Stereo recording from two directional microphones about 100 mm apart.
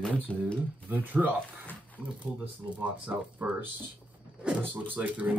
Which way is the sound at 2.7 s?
15° right (ahead or behind).